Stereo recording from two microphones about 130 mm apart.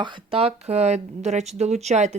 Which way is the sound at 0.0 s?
45° right (ahead or behind).